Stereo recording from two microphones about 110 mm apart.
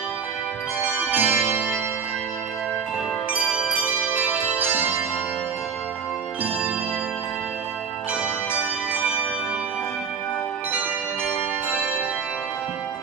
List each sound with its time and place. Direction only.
0.7 s organ: 10° right (ahead or behind)
3.8 s music: 15° right (ahead or behind)